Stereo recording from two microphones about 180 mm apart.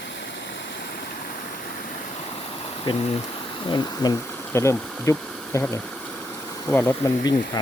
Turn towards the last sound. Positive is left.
turn(degrees=25)  # may be behind; listen again after turning